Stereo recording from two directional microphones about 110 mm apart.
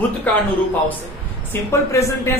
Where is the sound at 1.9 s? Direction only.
30° left (ahead or behind).